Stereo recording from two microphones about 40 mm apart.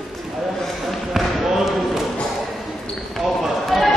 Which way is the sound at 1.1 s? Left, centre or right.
Centre.